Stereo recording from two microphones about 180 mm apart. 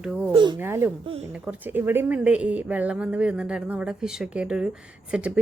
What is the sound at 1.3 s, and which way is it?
A woman's voice, 10° right (ahead or behind).